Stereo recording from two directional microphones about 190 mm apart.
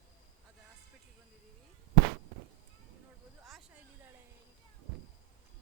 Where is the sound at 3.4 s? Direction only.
Centre (ahead or behind).